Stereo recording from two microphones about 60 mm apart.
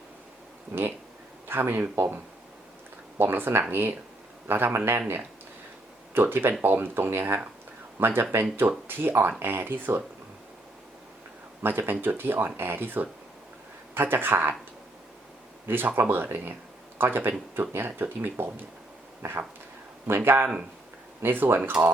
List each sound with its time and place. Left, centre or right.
0.7 s speech: right
3.2 s speech: right
11.6 s speech: right
15.6 s speech: right
20.1 s speech: right